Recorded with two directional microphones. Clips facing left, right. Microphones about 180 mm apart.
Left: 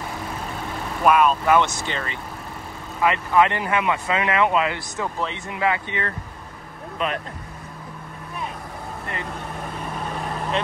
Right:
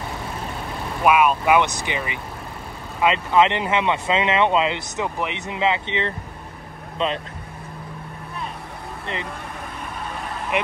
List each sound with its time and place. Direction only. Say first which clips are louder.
1.0 s speech: even; 10° right (ahead or behind); by 7.2 s 25° right (ahead or behind)
9.0 s speech: right 3 dB; 20° right (ahead or behind)
10.5 s speech: right 2 dB; 15° right (ahead or behind)